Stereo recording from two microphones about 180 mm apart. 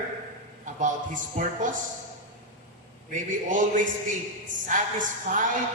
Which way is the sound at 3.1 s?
45° right (ahead or behind).